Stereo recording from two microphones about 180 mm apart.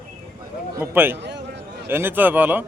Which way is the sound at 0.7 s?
10° right (ahead or behind).